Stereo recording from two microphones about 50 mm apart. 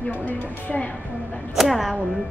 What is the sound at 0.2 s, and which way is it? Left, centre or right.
Speech, left.